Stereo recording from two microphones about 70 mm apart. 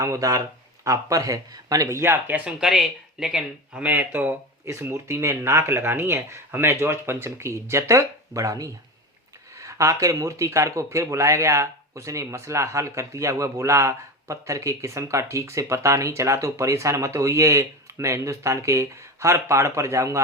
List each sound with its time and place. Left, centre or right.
0.0 s speech: right
2.0 s speech: right
2.4 s speech: centre
3.8 s speech: right
4.7 s speech: right